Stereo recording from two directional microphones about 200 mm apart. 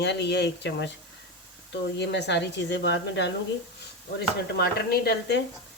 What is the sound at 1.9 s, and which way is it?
Speech, 60° left (ahead or behind).